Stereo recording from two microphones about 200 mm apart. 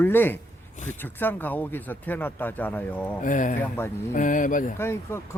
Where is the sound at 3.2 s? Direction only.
40° left (ahead or behind).